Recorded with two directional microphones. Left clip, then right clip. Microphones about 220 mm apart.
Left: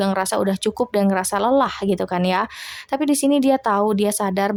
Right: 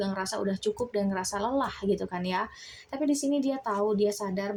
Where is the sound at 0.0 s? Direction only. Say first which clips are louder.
Left 11 dB; 35° left (ahead or behind).